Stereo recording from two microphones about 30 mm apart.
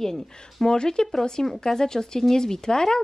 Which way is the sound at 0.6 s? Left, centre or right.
Left.